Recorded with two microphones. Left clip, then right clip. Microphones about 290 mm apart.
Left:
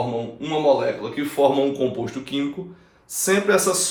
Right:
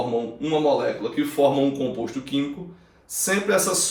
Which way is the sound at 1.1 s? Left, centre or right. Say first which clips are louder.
Left 1 dB; centre.